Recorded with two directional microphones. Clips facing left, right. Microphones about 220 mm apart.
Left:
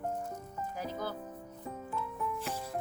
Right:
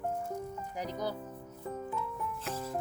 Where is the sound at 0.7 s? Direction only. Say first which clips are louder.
Right 2 dB; 15° right (ahead or behind).